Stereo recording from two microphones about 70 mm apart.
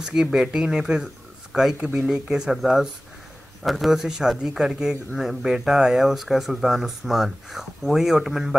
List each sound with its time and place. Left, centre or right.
0.0 s speech: centre
1.8 s a man's voice: centre